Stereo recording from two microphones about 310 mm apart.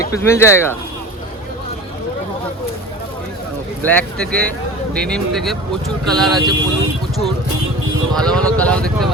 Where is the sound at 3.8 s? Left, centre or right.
Centre.